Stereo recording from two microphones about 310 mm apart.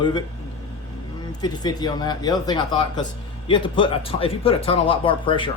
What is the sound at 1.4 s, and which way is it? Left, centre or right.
Speech, centre.